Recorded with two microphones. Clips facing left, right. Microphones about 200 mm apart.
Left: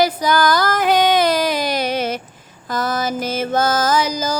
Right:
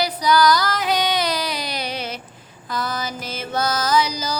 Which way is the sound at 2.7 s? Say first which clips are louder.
Left 6 dB; 45° left (ahead or behind).